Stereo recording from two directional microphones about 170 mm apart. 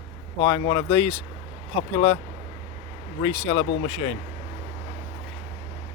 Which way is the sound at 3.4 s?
30° left (ahead or behind).